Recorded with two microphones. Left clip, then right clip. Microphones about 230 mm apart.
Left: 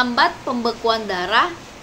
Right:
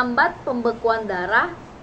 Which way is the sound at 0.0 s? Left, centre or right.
Centre.